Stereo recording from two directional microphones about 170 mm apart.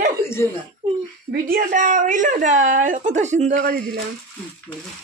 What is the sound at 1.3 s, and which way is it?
A woman's voice, 60° right (ahead or behind).